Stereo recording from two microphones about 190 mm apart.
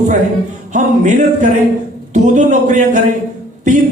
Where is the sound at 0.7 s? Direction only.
40° right (ahead or behind).